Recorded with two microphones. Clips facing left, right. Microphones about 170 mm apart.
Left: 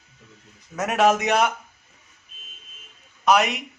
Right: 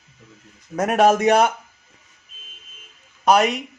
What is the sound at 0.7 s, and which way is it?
Speech, 55° right (ahead or behind).